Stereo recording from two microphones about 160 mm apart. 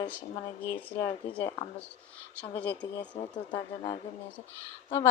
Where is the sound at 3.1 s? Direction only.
30° left (ahead or behind).